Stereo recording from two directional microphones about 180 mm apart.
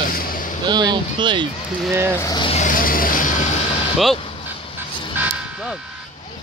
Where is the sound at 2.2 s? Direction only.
25° left (ahead or behind).